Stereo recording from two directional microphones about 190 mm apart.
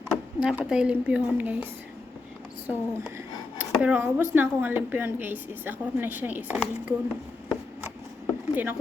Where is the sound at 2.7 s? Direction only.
10° right (ahead or behind).